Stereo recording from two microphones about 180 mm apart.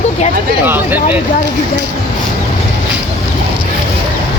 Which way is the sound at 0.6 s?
10° right (ahead or behind).